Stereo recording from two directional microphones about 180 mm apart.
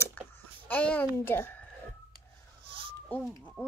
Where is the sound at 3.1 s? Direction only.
10° left (ahead or behind).